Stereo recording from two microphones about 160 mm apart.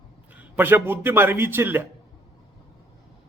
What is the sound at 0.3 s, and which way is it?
A man's voice, 10° right (ahead or behind).